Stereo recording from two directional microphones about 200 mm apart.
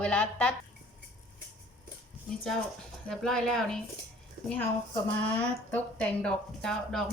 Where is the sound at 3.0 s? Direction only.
Centre (ahead or behind).